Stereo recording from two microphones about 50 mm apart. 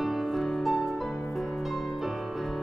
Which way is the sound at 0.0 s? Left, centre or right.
Centre.